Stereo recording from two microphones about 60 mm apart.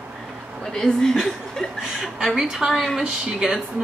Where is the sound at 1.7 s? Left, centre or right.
Centre.